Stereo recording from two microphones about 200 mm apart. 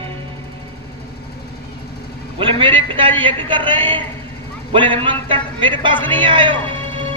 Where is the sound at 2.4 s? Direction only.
25° right (ahead or behind).